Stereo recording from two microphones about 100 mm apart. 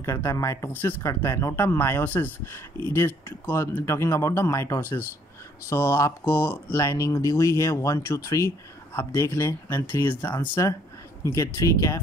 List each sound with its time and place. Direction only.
0.0 s speech: 25° left (ahead or behind)